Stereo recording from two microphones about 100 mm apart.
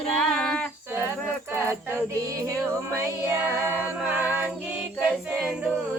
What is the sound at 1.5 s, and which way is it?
Music, 25° right (ahead or behind).